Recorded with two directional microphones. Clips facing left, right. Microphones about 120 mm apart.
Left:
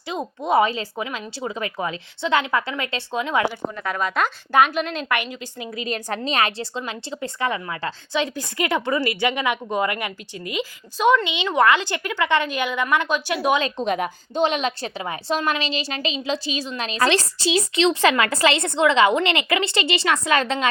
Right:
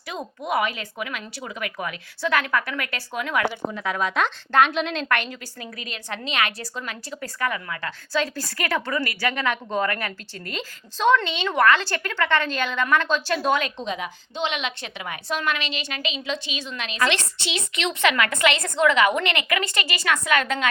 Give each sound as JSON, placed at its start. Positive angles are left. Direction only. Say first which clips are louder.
{"t": 0.1, "sound": "speech", "louder": "left 5 dB", "side_deg": 25}
{"t": 3.5, "sound": "a woman's voice", "louder": "even", "side_deg": 0}
{"t": 5.9, "sound": "speech", "louder": "left 6 dB", "side_deg": 40}
{"t": 13.6, "sound": "a woman's voice", "louder": "left 4 dB", "side_deg": 35}
{"t": 13.8, "sound": "a woman's voice", "louder": "left 6 dB", "side_deg": 55}